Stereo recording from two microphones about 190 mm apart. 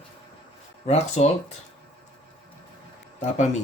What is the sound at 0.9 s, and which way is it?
Speech, 35° left (ahead or behind).